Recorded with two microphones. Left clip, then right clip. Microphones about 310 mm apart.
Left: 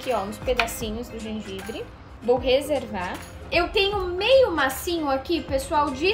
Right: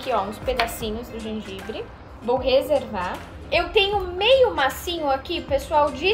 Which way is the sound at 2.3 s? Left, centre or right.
Left.